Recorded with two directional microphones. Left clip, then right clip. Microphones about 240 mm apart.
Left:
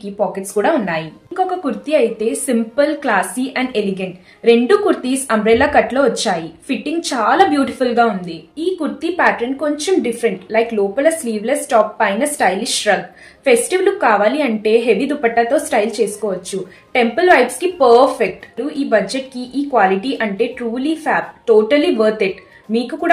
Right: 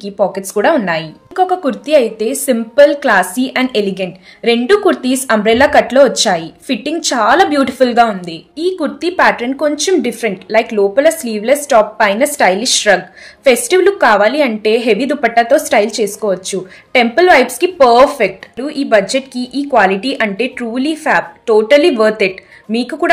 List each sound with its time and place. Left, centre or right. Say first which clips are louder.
0.0 s a woman's voice: right 5 dB; right